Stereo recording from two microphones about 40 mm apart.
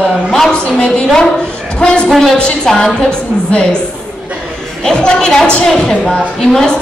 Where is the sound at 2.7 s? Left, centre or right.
Centre.